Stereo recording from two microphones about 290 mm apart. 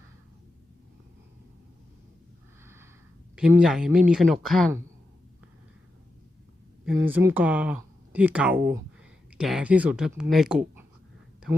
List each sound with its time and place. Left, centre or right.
3.3 s speech: centre
7.0 s speech: centre